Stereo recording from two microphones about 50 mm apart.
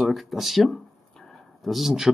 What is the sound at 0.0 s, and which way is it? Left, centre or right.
Speech, centre.